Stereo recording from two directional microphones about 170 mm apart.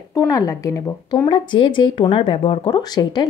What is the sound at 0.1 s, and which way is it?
Speech, 20° left (ahead or behind).